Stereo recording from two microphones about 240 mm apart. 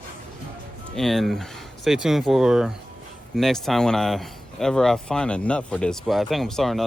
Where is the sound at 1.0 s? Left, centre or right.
Centre.